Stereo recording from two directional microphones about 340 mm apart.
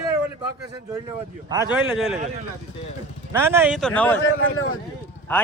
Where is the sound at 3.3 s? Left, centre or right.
Centre.